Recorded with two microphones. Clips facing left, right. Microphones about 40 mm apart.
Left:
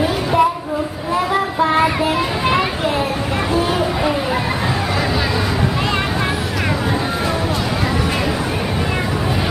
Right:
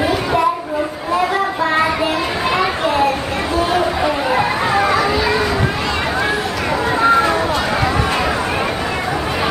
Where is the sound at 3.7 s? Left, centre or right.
Centre.